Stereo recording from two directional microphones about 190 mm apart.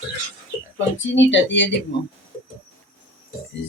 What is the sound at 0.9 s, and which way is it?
Speech, 80° left.